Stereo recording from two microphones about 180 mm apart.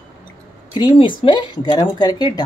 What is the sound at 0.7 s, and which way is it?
Speech, 25° left (ahead or behind).